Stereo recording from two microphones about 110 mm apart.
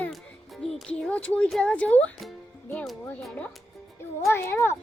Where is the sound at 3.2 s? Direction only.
10° left (ahead or behind).